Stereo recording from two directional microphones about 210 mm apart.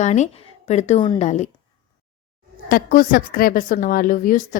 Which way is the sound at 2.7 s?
45° left (ahead or behind).